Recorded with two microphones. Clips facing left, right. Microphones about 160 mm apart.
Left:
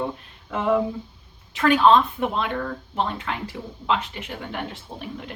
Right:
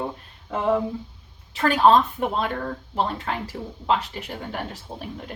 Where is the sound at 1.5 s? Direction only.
40° right (ahead or behind).